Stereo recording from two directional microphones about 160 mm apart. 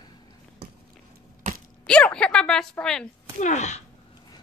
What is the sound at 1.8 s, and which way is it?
A woman's voice, 5° left (ahead or behind).